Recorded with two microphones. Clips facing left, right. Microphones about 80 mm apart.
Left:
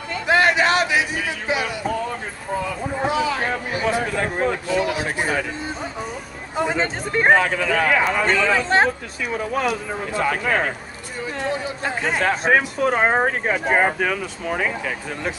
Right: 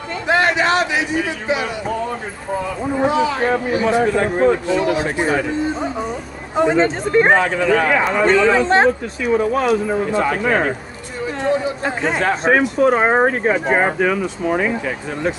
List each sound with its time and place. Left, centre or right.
0.3 s a sound: centre
3.1 s speech: centre
6.5 s speech: centre
10.2 s speech: centre